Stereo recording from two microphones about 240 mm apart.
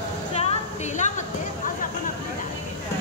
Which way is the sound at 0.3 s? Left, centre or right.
Left.